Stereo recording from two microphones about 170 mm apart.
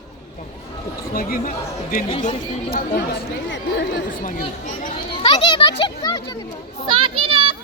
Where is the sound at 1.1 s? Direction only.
55° left (ahead or behind).